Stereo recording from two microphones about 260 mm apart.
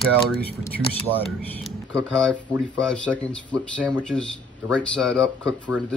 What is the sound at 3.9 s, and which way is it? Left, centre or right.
Speech, centre.